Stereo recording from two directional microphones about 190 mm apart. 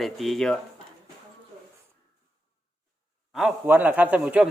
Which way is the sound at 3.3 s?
5° right (ahead or behind).